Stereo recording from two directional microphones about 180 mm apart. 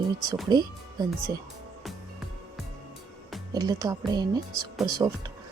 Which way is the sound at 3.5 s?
20° right (ahead or behind).